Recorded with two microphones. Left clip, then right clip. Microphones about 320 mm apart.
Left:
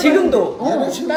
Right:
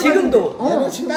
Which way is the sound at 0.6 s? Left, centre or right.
Centre.